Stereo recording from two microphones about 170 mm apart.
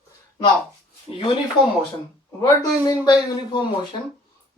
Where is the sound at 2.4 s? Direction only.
20° left (ahead or behind).